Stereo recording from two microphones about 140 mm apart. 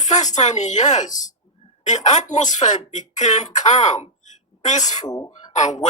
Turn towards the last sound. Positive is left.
turn(degrees=60)  # may be behind; listen again after turning